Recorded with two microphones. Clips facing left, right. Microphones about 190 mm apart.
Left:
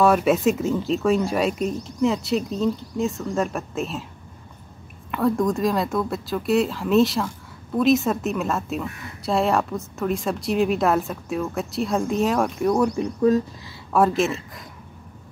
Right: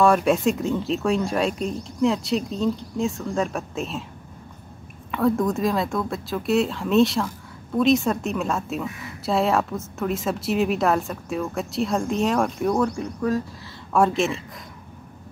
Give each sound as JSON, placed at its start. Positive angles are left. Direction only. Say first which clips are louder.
{"t": 0.0, "sound": "speech", "louder": "left 1 dB", "side_deg": 5}
{"t": 5.1, "sound": "speech", "louder": "even", "side_deg": 0}
{"t": 12.8, "sound": "speech", "louder": "left 5 dB", "side_deg": 15}
{"t": 13.9, "sound": "speech", "louder": "left 1 dB", "side_deg": 0}